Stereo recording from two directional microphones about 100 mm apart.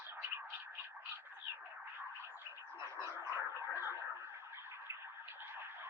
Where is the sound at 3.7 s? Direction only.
20° right (ahead or behind).